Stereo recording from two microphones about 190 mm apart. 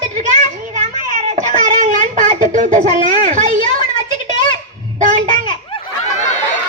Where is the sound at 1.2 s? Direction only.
40° right (ahead or behind).